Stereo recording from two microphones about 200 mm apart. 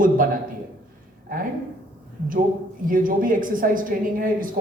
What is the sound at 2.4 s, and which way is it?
Speech, 45° right (ahead or behind).